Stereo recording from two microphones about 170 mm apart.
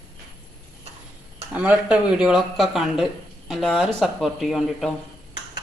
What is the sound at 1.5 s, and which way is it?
Speech, 10° right (ahead or behind).